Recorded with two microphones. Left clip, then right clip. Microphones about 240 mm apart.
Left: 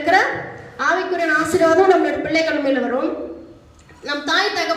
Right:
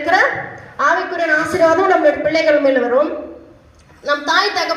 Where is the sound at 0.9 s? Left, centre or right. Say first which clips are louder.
Right 2 dB; centre.